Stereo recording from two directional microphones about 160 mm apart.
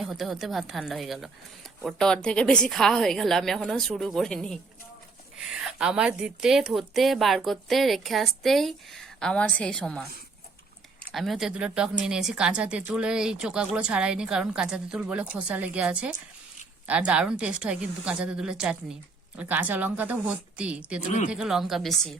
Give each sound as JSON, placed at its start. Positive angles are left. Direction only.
{"t": 0.0, "sound": "a woman's voice", "side_deg": 0}
{"t": 11.1, "sound": "a woman's voice", "side_deg": 0}
{"t": 21.0, "sound": "speech", "side_deg": 50}
{"t": 21.2, "sound": "a woman's voice", "side_deg": -5}